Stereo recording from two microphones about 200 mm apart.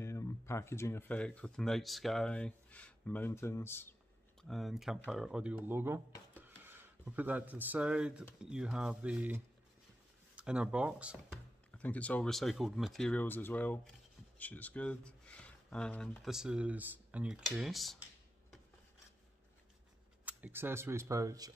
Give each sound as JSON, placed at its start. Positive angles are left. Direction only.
{"t": 0.0, "sound": "speech", "side_deg": 15}
{"t": 4.4, "sound": "speech", "side_deg": 0}
{"t": 11.7, "sound": "speech", "side_deg": 5}
{"t": 20.2, "sound": "speech", "side_deg": -10}